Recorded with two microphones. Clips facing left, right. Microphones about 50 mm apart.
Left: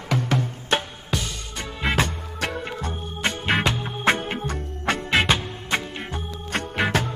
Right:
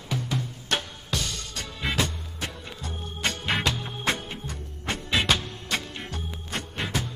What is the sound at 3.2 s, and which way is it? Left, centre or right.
Music, left.